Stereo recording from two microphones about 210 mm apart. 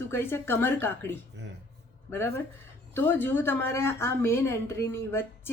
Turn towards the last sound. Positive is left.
turn(degrees=10)  # may be behind; listen again after turning